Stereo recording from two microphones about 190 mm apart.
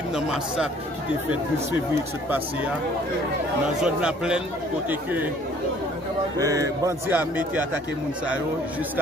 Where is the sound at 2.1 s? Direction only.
10° right (ahead or behind).